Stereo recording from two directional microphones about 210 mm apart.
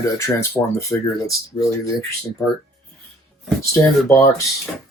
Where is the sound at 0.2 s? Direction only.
15° left (ahead or behind).